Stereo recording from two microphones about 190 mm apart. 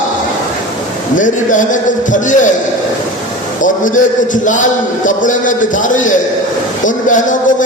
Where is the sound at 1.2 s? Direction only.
40° left (ahead or behind).